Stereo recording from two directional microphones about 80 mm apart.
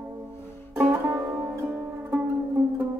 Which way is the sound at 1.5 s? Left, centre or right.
Right.